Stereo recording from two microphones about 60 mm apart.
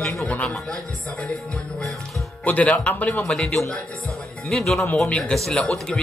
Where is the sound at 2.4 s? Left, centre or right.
Left.